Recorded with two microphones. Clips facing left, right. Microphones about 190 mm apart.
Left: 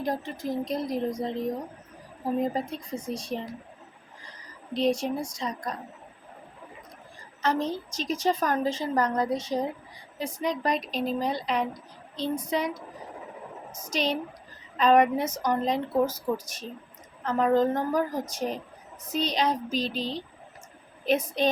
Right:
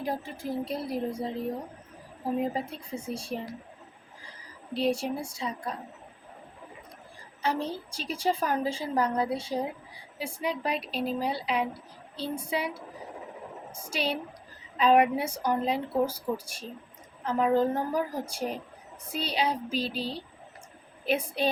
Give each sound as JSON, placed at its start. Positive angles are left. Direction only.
{"t": 0.0, "sound": "speech", "side_deg": -5}
{"t": 4.7, "sound": "speech", "side_deg": -10}
{"t": 7.4, "sound": "a woman's voice", "side_deg": -10}
{"t": 13.9, "sound": "speech", "side_deg": -5}